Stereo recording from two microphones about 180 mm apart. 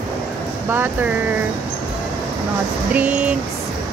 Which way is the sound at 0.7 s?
10° right (ahead or behind).